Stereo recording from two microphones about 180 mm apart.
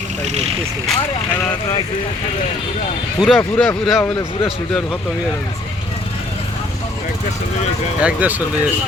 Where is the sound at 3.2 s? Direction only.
5° left (ahead or behind).